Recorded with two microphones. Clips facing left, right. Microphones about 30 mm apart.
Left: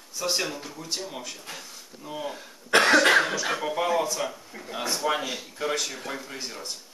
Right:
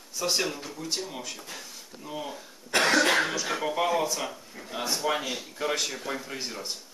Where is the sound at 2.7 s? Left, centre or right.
Left.